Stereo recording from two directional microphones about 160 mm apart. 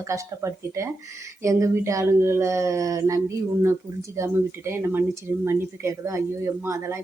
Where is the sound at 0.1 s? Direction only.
20° right (ahead or behind).